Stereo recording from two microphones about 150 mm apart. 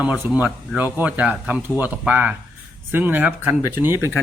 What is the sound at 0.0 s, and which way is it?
Speech, 10° right (ahead or behind).